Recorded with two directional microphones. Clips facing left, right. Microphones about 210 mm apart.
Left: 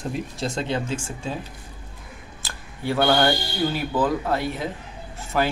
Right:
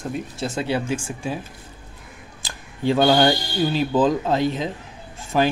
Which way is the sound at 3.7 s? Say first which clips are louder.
Right 7 dB; 20° right (ahead or behind).